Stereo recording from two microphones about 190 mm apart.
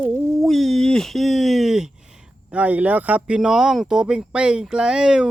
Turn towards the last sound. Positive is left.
turn(degrees=-5)  # may be behind; listen again after turning